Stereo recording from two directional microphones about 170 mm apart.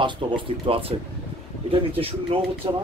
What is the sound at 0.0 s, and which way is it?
Speech, 30° right (ahead or behind).